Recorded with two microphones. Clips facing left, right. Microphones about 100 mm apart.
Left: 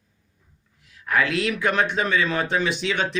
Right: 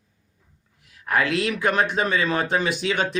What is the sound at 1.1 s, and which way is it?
Speech, 45° right (ahead or behind).